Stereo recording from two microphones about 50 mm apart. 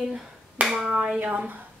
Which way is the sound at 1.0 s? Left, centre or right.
Right.